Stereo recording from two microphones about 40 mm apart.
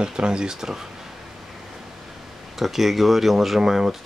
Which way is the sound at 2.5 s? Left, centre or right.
Centre.